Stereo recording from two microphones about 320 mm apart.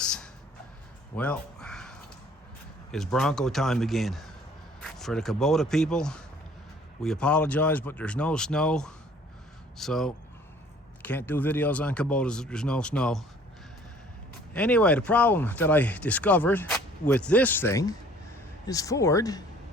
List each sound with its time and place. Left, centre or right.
0.0 s a sound: centre
2.9 s speech: centre
14.5 s speech: centre